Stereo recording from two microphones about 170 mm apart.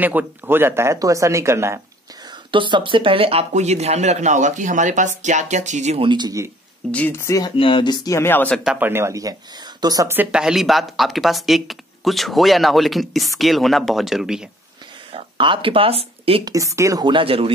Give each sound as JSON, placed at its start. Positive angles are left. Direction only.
{"t": 0.0, "sound": "speech", "side_deg": -10}
{"t": 2.5, "sound": "speech", "side_deg": -30}
{"t": 6.0, "sound": "speech", "side_deg": -25}
{"t": 6.9, "sound": "speech", "side_deg": 10}
{"t": 7.5, "sound": "speech", "side_deg": 30}
{"t": 8.6, "sound": "speech", "side_deg": -10}
{"t": 15.1, "sound": "speech", "side_deg": -30}
{"t": 16.4, "sound": "speech", "side_deg": -20}